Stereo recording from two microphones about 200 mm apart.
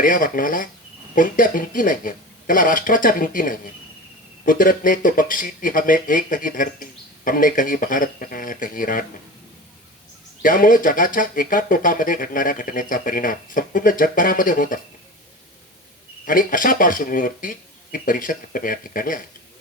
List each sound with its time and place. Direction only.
0.0 s speech: 45° left (ahead or behind)
10.4 s speech: 45° left (ahead or behind)
16.2 s speech: 45° left (ahead or behind)